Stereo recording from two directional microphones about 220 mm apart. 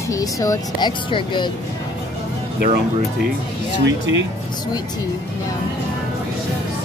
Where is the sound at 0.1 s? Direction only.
15° left (ahead or behind).